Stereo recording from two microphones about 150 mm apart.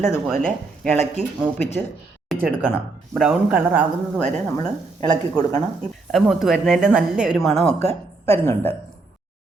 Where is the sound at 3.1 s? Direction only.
5° right (ahead or behind).